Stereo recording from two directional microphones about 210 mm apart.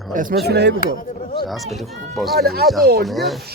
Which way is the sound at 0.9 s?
45° left (ahead or behind).